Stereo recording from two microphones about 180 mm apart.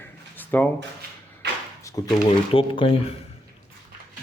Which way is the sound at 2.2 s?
30° left (ahead or behind).